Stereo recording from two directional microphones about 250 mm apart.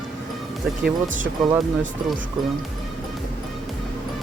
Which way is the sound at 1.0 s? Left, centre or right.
Right.